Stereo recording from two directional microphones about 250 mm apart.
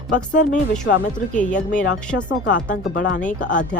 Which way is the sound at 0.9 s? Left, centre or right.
Left.